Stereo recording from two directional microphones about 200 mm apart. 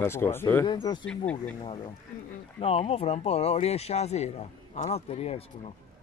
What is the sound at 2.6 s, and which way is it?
Speech, 30° left (ahead or behind).